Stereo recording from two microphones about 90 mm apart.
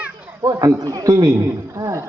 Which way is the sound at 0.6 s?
40° right (ahead or behind).